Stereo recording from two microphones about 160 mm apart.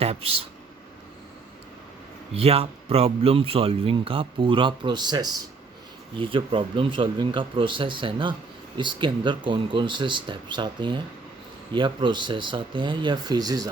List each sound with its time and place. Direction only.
0.0 s speech: 40° right (ahead or behind)
2.3 s speech: 40° right (ahead or behind)